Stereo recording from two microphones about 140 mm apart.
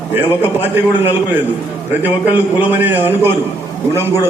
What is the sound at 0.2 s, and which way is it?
A man's voice, 15° right (ahead or behind).